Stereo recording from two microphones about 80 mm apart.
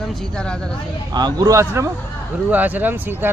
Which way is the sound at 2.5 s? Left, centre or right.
Right.